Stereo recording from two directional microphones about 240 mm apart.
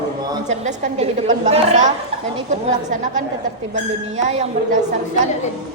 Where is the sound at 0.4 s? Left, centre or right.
Right.